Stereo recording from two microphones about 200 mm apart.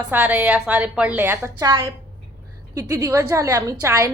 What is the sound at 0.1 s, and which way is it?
A woman's voice, 10° right (ahead or behind).